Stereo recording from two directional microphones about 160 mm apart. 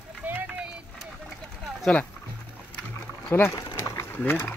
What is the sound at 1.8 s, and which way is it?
Speech, 5° left (ahead or behind).